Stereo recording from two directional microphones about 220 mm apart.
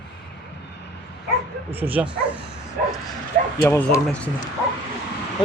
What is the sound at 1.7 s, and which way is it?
Speech, 10° right (ahead or behind).